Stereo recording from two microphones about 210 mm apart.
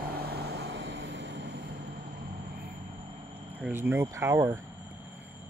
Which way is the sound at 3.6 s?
10° right (ahead or behind).